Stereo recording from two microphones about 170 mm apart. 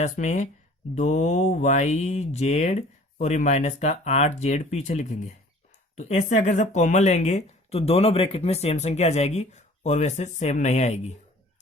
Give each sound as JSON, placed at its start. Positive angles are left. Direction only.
{"t": 0.0, "sound": "speech", "side_deg": 45}